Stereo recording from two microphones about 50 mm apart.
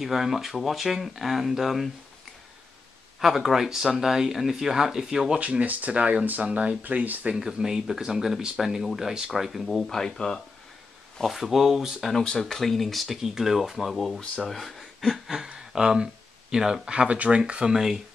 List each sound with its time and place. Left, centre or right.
0.0 s speech: centre
3.2 s speech: centre
5.4 s speech: right
7.3 s speech: centre
11.1 s speech: centre
12.1 s speech: centre
14.2 s speech: centre
14.5 s speech: centre